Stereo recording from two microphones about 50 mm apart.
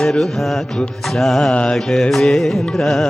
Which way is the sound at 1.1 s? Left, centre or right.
Centre.